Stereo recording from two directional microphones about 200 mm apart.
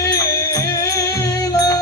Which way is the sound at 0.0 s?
15° left (ahead or behind).